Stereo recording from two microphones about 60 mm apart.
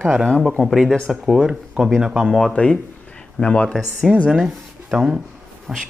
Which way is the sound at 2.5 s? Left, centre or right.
Centre.